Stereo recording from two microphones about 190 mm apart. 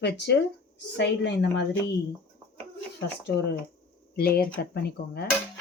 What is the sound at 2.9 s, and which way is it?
Speech, 65° left (ahead or behind).